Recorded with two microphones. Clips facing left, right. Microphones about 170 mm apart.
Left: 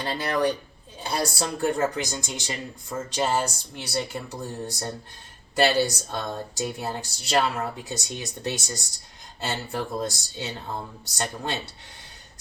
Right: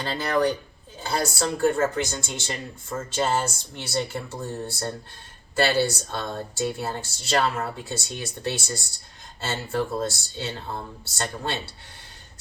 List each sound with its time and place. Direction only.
0.0 s speech: 15° left (ahead or behind)